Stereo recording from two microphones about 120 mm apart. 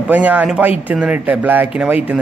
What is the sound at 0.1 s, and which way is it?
Speech, 15° right (ahead or behind).